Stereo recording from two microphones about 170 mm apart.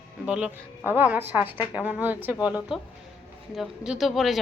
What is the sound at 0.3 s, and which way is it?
A woman's voice, 5° right (ahead or behind).